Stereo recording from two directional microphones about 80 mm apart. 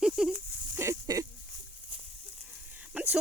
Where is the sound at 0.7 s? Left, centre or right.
Right.